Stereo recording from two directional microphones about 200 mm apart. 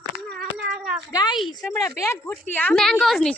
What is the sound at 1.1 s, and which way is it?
A woman's voice, 20° left (ahead or behind).